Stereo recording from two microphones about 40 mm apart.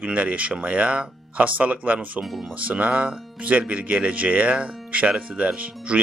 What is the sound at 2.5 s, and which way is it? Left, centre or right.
Speech, right.